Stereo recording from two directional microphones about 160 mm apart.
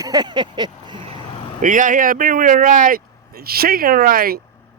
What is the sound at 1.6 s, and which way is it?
Speech, 55° right (ahead or behind).